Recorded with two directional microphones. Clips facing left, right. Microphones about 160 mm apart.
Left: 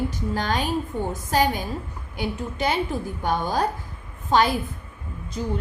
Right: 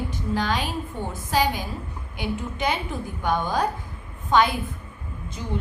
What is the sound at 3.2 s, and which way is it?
Speech, 40° left (ahead or behind).